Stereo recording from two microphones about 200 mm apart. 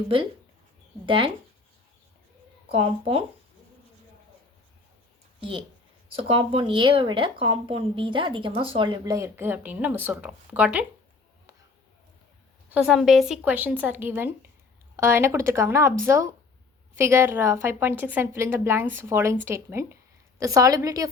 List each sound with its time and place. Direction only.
1.0 s speech: 25° right (ahead or behind)
2.7 s speech: 30° right (ahead or behind)
5.4 s speech: 25° right (ahead or behind); by 10.8 s 5° right (ahead or behind)
12.7 s a woman's voice: 5° right (ahead or behind)